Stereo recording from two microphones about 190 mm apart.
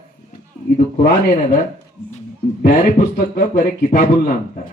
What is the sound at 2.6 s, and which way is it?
A man's voice, 50° left (ahead or behind).